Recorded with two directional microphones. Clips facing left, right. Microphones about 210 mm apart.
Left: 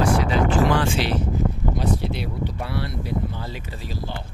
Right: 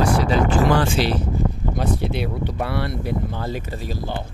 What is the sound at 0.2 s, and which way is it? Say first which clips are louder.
Speech: right 1 dB; 40° right (ahead or behind).